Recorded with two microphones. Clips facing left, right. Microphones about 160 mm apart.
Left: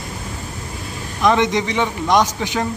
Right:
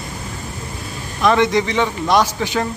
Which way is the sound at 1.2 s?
15° left (ahead or behind).